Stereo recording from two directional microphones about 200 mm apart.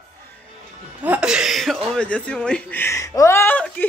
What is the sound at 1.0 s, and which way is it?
A woman's voice, 5° right (ahead or behind).